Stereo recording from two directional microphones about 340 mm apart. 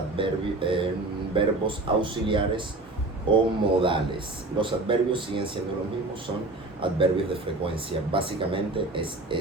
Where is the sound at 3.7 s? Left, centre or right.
Centre.